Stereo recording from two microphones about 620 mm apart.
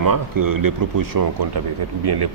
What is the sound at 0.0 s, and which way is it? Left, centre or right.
Speech, right.